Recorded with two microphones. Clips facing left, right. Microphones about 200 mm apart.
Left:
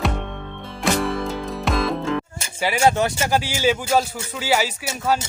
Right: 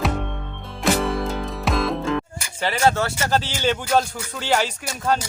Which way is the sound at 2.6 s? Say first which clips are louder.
Left 2 dB; 10° left (ahead or behind).